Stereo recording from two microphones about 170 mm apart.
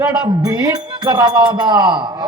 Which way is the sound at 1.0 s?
25° right (ahead or behind).